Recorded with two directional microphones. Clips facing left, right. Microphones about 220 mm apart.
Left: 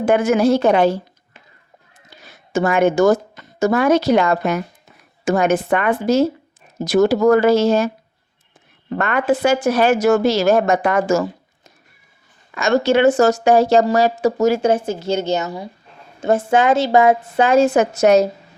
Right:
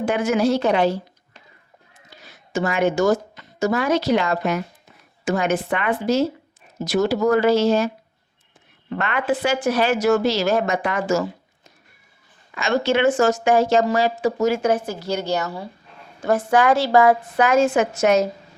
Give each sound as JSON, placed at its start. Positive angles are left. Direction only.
{"t": 0.0, "sound": "a woman's voice", "side_deg": 55}
{"t": 2.2, "sound": "a woman's voice", "side_deg": 50}
{"t": 8.9, "sound": "a woman's voice", "side_deg": 45}
{"t": 12.5, "sound": "speech", "side_deg": 45}
{"t": 14.6, "sound": "a woman's voice", "side_deg": 25}